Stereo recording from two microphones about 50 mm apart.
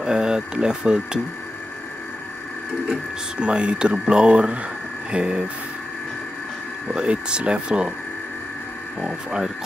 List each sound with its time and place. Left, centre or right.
0.0 s speech: centre
3.3 s speech: right
6.9 s speech: centre
9.0 s speech: centre